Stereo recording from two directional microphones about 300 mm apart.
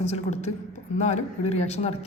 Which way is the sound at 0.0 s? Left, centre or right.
Left.